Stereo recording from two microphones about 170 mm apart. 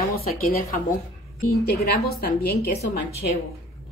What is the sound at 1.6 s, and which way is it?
Speech, 70° left (ahead or behind).